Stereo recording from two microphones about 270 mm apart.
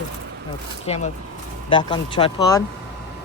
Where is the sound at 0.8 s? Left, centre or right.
Left.